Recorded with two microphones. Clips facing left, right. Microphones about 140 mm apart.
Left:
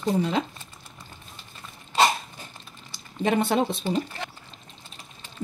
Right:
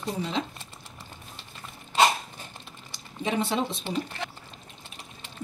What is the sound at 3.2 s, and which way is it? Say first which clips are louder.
Speech: left 5 dB; 60° left (ahead or behind).